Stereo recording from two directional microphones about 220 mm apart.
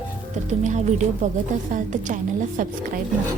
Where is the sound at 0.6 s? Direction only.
30° right (ahead or behind).